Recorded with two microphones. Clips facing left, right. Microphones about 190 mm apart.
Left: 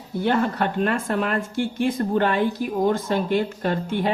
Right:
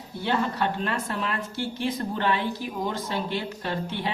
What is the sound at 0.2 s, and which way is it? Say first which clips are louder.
Speech: left 5 dB; 50° left (ahead or behind).